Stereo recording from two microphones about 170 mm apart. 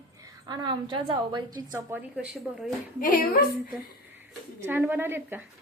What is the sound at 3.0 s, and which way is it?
Speech, 55° left (ahead or behind).